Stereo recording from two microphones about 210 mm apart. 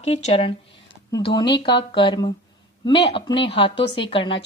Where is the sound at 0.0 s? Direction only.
30° left (ahead or behind).